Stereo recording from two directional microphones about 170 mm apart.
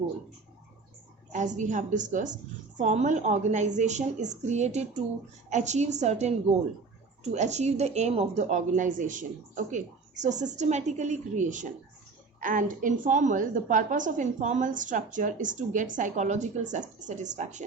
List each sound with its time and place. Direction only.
1.3 s a woman's voice: 45° right (ahead or behind)